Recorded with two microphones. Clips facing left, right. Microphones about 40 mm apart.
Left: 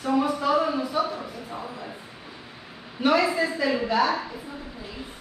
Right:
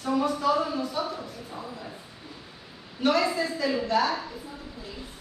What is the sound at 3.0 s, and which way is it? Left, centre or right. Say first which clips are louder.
A woman's voice: left 3 dB; centre.